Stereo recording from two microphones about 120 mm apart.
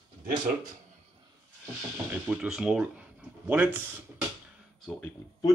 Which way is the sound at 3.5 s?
15° right (ahead or behind).